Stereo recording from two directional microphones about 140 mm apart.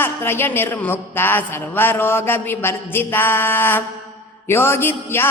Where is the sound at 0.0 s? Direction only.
15° left (ahead or behind).